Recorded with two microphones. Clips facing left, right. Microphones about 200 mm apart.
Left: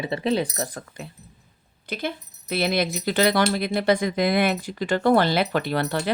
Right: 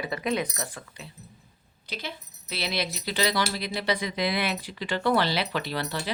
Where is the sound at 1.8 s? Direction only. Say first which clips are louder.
Left 8 dB; 50° left (ahead or behind).